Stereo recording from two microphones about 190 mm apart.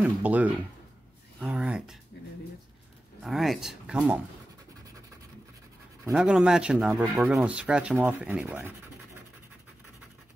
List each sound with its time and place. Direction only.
0.0 s speech: 10° right (ahead or behind)
1.4 s a sound: 5° right (ahead or behind)
3.2 s speech: centre (ahead or behind)
6.1 s speech: 5° right (ahead or behind)